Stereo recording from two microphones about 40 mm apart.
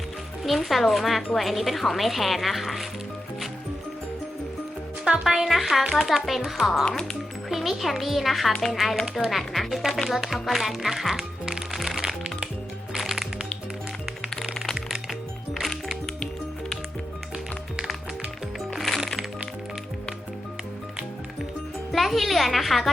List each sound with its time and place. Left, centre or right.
0.4 s speech: centre
5.0 s speech: centre
6.8 s speech: left
7.5 s speech: centre
11.7 s music: centre
18.7 s music: centre
21.9 s a woman's voice: centre